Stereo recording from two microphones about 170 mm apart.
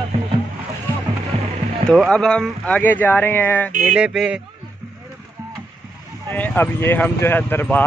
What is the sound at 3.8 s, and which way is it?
Speech, 5° right (ahead or behind).